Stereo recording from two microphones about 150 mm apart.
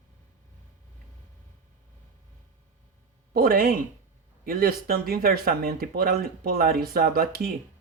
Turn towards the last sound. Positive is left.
turn(degrees=-75)  # may be behind; listen again after turning